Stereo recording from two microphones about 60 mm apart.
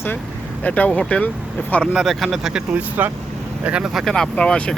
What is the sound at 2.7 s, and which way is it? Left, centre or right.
Speech, right.